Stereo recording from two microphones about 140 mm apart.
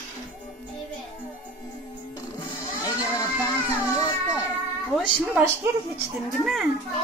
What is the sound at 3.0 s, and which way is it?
Music, 25° left (ahead or behind).